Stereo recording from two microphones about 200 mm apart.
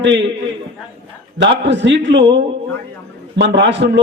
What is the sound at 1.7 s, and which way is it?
Speech, 65° right (ahead or behind).